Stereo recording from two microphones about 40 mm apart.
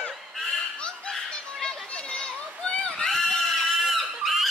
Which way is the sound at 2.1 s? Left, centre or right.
Left.